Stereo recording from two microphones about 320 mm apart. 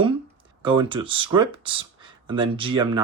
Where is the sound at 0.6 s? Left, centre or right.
Centre.